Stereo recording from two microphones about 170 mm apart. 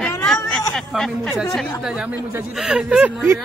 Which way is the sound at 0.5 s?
5° left (ahead or behind).